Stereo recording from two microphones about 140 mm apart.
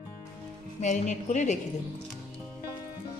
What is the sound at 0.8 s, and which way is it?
Speech, 55° left (ahead or behind).